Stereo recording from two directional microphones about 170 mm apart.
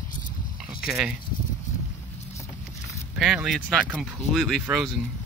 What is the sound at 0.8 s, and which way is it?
Speech, 5° right (ahead or behind).